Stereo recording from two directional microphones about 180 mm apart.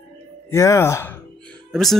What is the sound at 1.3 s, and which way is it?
Music, 5° left (ahead or behind).